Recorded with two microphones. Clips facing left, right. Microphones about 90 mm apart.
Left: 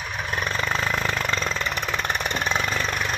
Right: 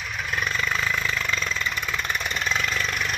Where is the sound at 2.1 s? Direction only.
25° left (ahead or behind).